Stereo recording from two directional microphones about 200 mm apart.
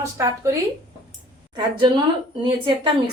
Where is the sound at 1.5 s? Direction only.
25° right (ahead or behind).